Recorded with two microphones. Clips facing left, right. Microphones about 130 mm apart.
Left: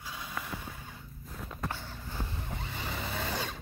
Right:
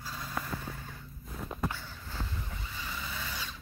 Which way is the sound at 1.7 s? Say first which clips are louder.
Left 1 dB; 15° left (ahead or behind).